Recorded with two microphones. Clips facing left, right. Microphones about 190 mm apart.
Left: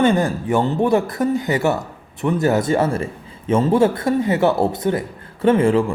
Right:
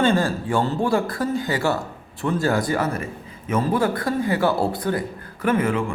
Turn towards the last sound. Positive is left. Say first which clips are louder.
# left 6 dB
turn(degrees=30)  # may be behind; listen again after turning